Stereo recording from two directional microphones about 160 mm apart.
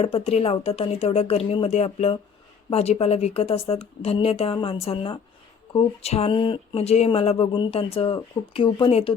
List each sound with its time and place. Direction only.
0.0 s speech: 40° left (ahead or behind)